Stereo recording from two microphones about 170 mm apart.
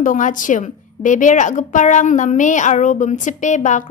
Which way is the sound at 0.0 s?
50° left (ahead or behind).